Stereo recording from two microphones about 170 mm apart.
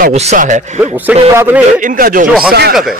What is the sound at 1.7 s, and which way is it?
Speech, 50° right (ahead or behind).